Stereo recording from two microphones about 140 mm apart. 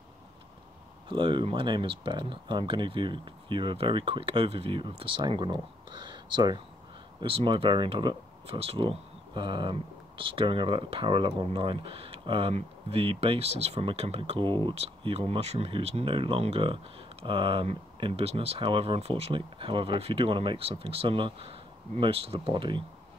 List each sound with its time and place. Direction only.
1.0 s speech: 35° right (ahead or behind)